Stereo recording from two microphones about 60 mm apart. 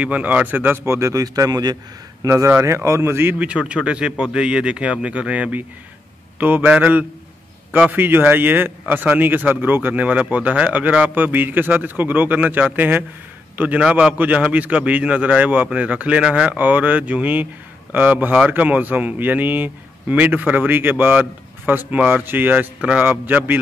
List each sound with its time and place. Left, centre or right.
0.0 s a man's voice: right
0.8 s speech: right
1.1 s speech: right
2.2 s speech: right
3.3 s a man's voice: right